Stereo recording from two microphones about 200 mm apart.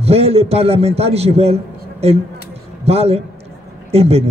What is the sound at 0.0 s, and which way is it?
A man's voice, 30° right (ahead or behind).